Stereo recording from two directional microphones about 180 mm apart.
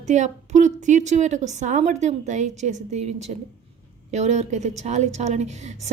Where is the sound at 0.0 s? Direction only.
40° right (ahead or behind).